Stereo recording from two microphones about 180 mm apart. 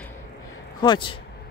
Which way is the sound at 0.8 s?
25° left (ahead or behind).